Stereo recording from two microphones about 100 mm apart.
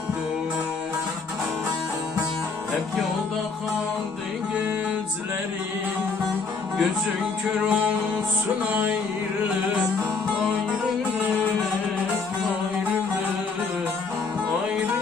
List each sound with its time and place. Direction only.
7.6 s music: 10° right (ahead or behind)